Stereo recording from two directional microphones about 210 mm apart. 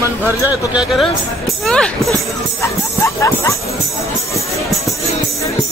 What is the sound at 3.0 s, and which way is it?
Speech, 15° left (ahead or behind).